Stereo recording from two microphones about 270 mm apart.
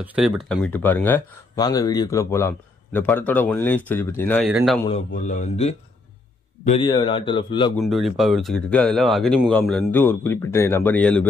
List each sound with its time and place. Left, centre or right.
0.0 s speech: centre
4.5 s speech: centre
4.8 s speech: left
7.7 s speech: centre